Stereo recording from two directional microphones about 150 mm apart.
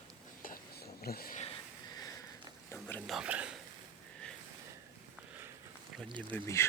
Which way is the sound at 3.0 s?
5° right (ahead or behind).